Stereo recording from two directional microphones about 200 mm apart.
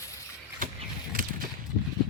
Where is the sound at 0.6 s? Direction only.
45° right (ahead or behind).